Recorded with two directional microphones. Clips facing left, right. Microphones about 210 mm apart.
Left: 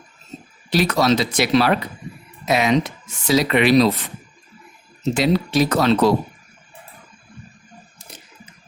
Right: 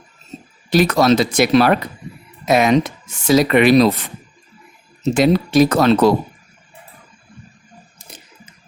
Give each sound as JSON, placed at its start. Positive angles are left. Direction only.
{"t": 0.7, "sound": "speech", "side_deg": -50}
{"t": 5.1, "sound": "speech", "side_deg": -50}